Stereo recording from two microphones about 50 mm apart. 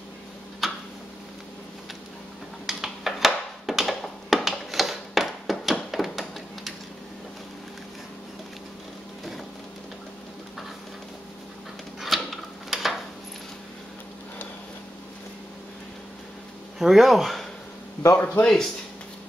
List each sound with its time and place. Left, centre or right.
0.6 s tick-tock: centre
2.6 s a sound: centre
12.0 s tick-tock: centre
16.7 s speech: centre
18.1 s a man's voice: left